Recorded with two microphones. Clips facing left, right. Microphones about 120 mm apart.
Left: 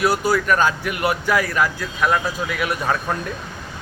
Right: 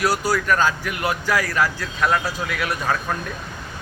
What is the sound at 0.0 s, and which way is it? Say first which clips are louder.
A man's voice: left 2 dB; 20° left (ahead or behind).